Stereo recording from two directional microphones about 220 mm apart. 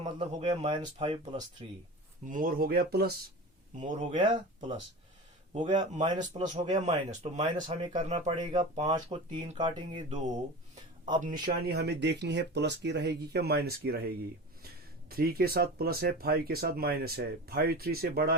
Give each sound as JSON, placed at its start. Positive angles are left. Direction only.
{"t": 0.0, "sound": "speech", "side_deg": -30}
{"t": 2.2, "sound": "a man's voice", "side_deg": -40}
{"t": 3.8, "sound": "a man's voice", "side_deg": -35}
{"t": 4.2, "sound": "speech", "side_deg": -20}
{"t": 5.5, "sound": "a man's voice", "side_deg": -35}
{"t": 8.4, "sound": "speech", "side_deg": -20}
{"t": 15.1, "sound": "speech", "side_deg": -45}